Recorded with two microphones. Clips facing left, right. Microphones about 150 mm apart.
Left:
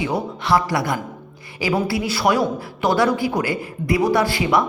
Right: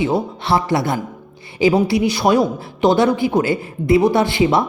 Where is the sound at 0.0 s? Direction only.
25° right (ahead or behind).